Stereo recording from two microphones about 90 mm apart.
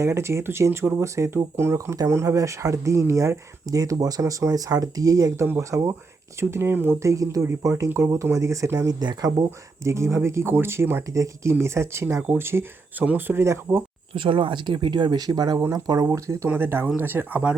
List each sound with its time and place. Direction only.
0.0 s speech: 30° right (ahead or behind)
6.4 s speech: 25° right (ahead or behind)
7.0 s speech: 35° right (ahead or behind)
9.8 s speech: 30° right (ahead or behind)
11.1 s speech: 35° right (ahead or behind)
14.1 s speech: 70° right (ahead or behind); by 17.6 s 15° right (ahead or behind)